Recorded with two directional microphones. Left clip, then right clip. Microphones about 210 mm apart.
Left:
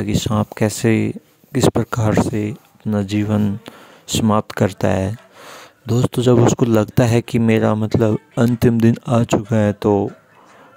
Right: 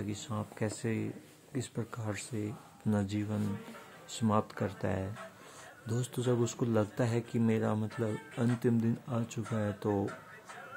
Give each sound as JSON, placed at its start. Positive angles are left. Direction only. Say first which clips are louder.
{"t": 0.0, "sound": "speech", "louder": "left 19 dB", "side_deg": 50}